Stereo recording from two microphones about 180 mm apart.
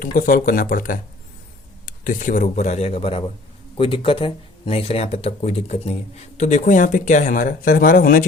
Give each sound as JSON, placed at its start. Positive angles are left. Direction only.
{"t": 0.0, "sound": "speech", "side_deg": 50}